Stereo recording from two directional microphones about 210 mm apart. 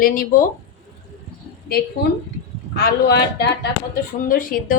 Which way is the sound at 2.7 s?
50° left (ahead or behind).